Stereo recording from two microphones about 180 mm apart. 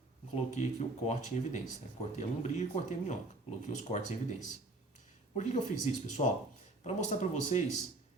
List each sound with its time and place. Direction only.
0.3 s speech: 40° left (ahead or behind)
5.4 s speech: 40° left (ahead or behind)